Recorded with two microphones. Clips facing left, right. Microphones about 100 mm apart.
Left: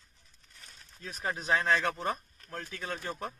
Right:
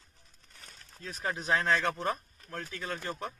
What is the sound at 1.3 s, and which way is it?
Speech, centre (ahead or behind).